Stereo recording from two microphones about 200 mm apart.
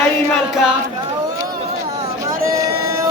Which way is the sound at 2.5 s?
15° right (ahead or behind).